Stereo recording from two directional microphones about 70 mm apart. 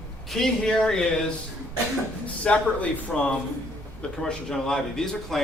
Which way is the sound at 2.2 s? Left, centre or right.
Centre.